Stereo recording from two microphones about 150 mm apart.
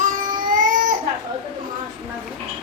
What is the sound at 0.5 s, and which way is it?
Baby cry, 60° right (ahead or behind).